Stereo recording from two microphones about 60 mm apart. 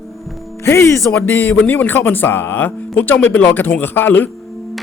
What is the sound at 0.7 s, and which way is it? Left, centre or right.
Speech, left.